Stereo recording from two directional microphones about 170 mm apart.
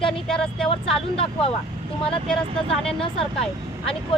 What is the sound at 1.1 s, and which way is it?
Speech, 35° left (ahead or behind).